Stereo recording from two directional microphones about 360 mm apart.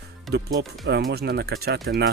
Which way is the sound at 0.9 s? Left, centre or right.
Right.